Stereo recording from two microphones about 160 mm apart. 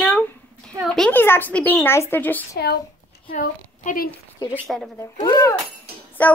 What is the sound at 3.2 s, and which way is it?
Speech, 55° left (ahead or behind).